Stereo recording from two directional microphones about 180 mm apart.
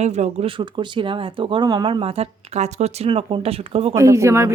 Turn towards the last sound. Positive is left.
turn(degrees=-15)  # may be behind; listen again after turning